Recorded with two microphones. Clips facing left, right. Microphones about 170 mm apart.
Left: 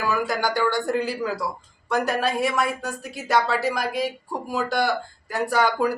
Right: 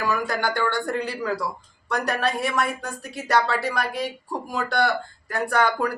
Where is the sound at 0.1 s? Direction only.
5° left (ahead or behind).